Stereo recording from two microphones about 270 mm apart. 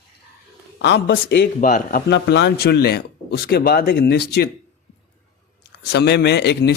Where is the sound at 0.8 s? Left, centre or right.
Left.